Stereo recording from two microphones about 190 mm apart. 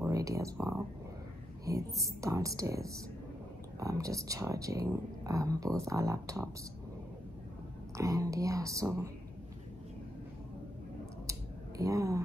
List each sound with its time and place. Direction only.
0.0 s speech: 15° right (ahead or behind)
8.0 s speech: 15° right (ahead or behind)
11.2 s a sound: 15° right (ahead or behind)